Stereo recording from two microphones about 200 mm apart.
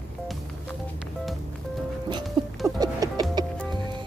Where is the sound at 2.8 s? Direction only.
20° right (ahead or behind).